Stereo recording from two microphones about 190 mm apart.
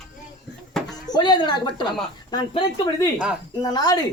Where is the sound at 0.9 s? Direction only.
20° left (ahead or behind).